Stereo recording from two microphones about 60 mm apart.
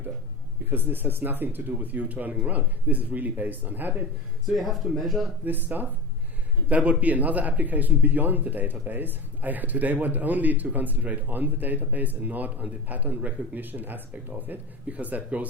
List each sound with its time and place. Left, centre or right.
0.7 s speech: right
4.4 s speech: centre
5.5 s speech: right